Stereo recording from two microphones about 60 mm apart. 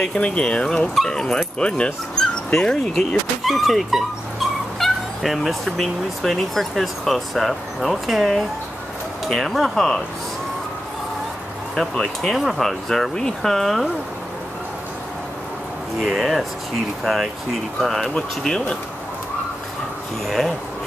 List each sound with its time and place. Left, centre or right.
0.0 s speech: centre
11.7 s speech: centre
16.0 s speech: centre
20.2 s speech: centre